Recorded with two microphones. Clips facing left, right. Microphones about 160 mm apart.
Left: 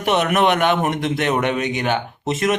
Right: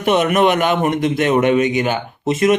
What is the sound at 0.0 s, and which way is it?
Speech, centre (ahead or behind).